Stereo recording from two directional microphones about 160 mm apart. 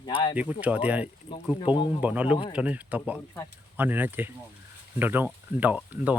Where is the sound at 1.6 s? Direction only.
30° left (ahead or behind).